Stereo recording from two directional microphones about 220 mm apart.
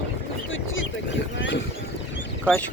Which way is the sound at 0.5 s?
60° left (ahead or behind).